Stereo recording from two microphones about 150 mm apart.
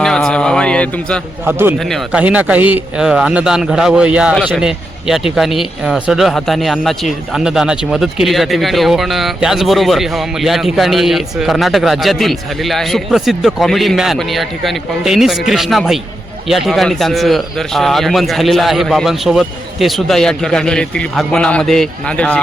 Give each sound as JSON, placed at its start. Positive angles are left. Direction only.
{"t": 0.0, "sound": "a sound", "side_deg": 5}
{"t": 1.5, "sound": "a man's voice", "side_deg": -15}
{"t": 1.8, "sound": "speech", "side_deg": 0}
{"t": 2.2, "sound": "a man's voice", "side_deg": -10}